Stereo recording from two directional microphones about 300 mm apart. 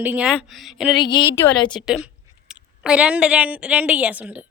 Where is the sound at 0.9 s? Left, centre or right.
Centre.